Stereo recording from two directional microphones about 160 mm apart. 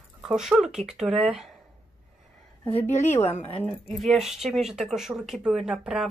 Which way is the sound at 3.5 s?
35° left (ahead or behind).